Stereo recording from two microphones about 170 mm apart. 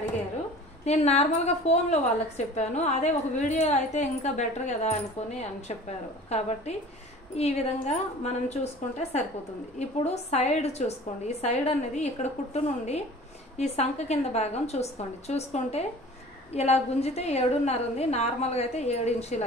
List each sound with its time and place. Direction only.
0.8 s a woman's voice: 40° left (ahead or behind)